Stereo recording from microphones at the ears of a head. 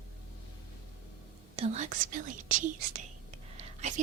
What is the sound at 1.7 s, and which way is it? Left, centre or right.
Whispering, right.